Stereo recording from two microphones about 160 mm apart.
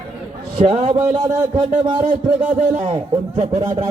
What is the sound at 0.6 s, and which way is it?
Speech, 40° right (ahead or behind).